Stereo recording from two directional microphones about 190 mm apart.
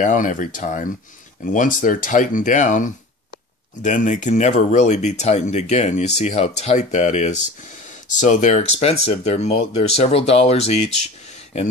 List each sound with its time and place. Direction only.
0.0 s speech: 40° left (ahead or behind)